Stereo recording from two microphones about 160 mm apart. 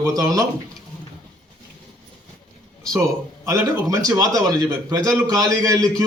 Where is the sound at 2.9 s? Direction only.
20° right (ahead or behind).